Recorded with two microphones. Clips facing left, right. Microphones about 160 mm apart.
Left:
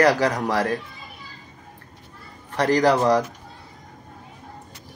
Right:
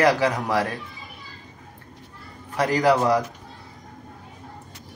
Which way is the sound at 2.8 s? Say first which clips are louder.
Even; 40° left (ahead or behind).